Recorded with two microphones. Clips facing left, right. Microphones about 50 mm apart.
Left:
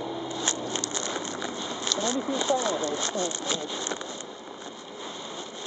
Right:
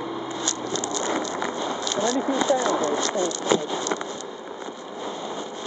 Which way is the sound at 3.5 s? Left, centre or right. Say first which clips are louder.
Right 9 dB; right.